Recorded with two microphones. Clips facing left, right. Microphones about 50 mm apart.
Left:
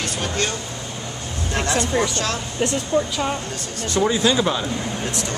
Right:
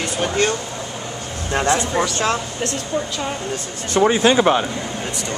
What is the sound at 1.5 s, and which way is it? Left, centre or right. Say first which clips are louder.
Speech: right 5 dB; right.